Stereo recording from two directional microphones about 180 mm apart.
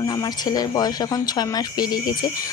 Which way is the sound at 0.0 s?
20° left (ahead or behind).